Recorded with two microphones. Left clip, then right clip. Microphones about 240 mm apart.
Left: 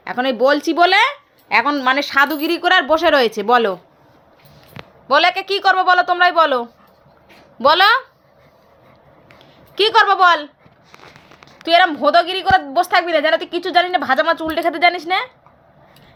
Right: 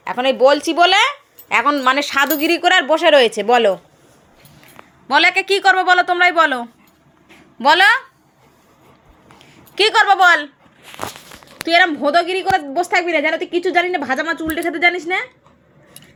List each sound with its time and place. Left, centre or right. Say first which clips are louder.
0.0 s a woman's voice: right 3 dB; centre
5.0 s a woman's voice: right 1 dB; centre
9.7 s a woman's voice: even; centre
11.6 s a woman's voice: left 1 dB; centre